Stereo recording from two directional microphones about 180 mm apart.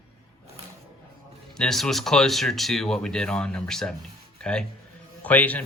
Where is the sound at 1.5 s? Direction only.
5° left (ahead or behind).